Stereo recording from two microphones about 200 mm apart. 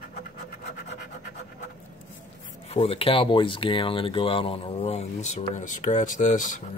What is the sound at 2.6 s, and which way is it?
Speech, 30° left (ahead or behind).